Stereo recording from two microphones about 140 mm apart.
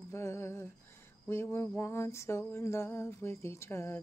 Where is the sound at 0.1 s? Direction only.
20° left (ahead or behind).